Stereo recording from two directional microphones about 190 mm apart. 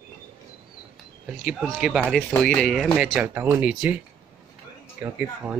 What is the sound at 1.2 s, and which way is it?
Speech, 5° right (ahead or behind).